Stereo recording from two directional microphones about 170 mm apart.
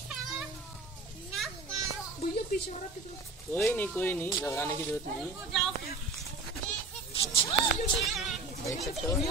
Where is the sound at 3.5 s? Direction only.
10° left (ahead or behind).